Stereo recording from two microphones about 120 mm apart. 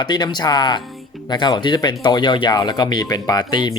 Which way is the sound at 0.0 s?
40° left (ahead or behind).